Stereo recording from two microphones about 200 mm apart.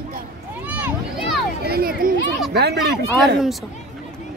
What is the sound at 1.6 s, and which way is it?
Speech, 50° right (ahead or behind).